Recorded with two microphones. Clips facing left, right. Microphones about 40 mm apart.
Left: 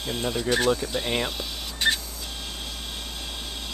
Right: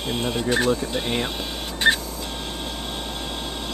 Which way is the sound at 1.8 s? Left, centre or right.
Right.